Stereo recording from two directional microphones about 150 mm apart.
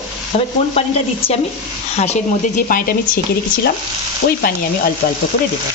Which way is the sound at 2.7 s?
75° left (ahead or behind).